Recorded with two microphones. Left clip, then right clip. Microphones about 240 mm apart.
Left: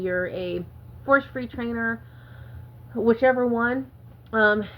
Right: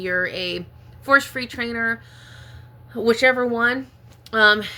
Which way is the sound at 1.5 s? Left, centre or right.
Right.